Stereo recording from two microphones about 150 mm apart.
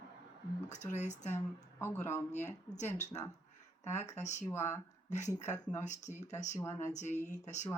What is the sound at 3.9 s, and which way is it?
Speech, 50° left (ahead or behind).